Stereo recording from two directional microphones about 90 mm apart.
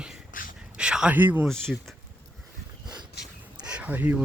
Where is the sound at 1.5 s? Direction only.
5° left (ahead or behind).